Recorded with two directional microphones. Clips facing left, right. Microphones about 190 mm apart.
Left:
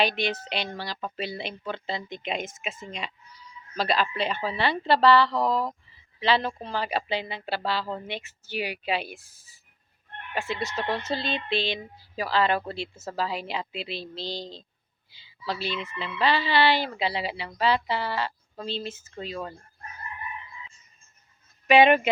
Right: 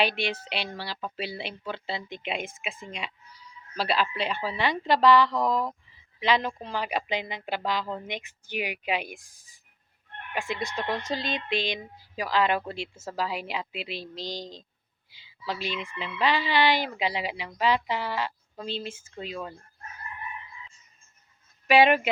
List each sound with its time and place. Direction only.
0.0 s speech: 10° right (ahead or behind)
2.4 s speech: 40° left (ahead or behind)
2.8 s speech: 10° right (ahead or behind)
5.4 s speech: 30° left (ahead or behind)
6.1 s speech: 10° right (ahead or behind)
6.5 s speech: 10° left (ahead or behind)
6.7 s speech: 10° right (ahead or behind)
10.5 s speech: 10° right (ahead or behind)
15.1 s a sound: 10° right (ahead or behind)
15.7 s speech: 10° right (ahead or behind)
21.7 s speech: 5° right (ahead or behind)